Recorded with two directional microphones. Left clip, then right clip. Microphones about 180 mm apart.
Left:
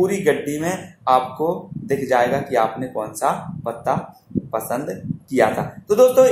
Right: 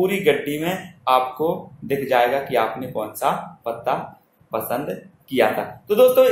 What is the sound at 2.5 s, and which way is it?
Speech, 25° left (ahead or behind).